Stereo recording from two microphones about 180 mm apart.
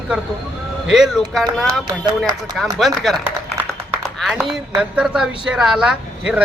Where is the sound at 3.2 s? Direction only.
10° right (ahead or behind).